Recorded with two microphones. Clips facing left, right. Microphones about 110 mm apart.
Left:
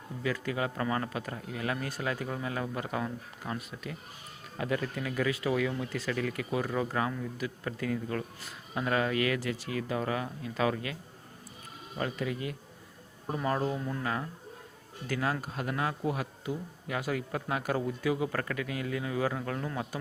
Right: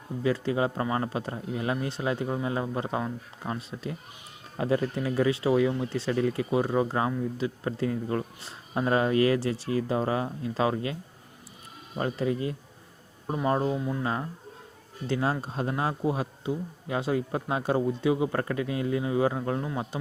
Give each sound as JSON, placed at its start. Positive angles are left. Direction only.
{"t": 0.2, "sound": "speech", "side_deg": -25}
{"t": 11.9, "sound": "speech", "side_deg": -30}
{"t": 13.7, "sound": "speech", "side_deg": -15}
{"t": 14.0, "sound": "speech", "side_deg": -25}